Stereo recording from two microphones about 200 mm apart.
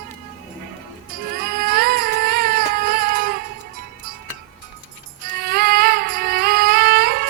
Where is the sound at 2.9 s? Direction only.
50° right (ahead or behind).